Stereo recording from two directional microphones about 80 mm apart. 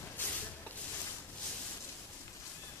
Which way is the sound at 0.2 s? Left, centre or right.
Left.